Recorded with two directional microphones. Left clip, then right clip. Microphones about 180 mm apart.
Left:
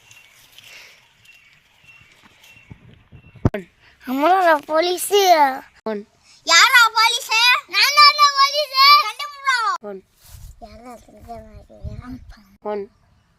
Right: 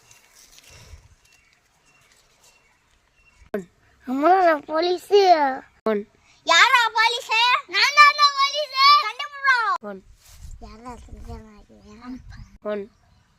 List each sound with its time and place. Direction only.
3.5 s a sound: 5° right (ahead or behind)
7.7 s child singing: 10° left (ahead or behind)
9.0 s cat: 15° right (ahead or behind)